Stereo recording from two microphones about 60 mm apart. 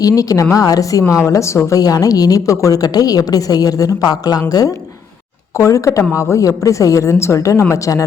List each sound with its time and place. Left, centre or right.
0.0 s a woman's voice: left
1.7 s a woman's voice: left
5.5 s a woman's voice: left